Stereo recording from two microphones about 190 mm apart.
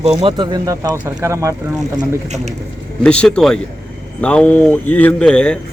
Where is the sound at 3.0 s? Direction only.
5° left (ahead or behind).